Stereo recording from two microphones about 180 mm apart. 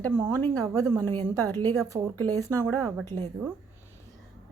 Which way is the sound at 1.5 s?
10° left (ahead or behind).